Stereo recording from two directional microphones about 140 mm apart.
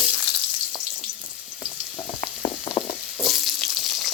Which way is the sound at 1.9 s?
40° left (ahead or behind).